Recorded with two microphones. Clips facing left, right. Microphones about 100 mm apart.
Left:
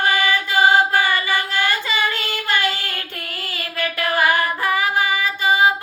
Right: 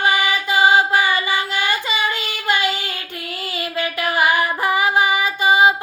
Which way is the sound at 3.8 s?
20° right (ahead or behind).